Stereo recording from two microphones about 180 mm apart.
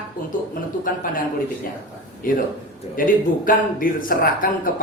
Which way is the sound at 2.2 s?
50° left (ahead or behind).